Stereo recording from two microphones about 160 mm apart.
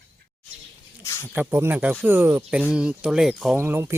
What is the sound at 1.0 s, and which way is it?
Speech, 20° left (ahead or behind).